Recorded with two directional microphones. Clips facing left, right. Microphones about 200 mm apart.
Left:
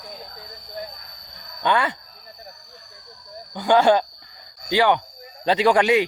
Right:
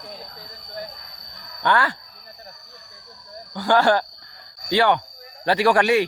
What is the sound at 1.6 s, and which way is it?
Speech, 20° left (ahead or behind).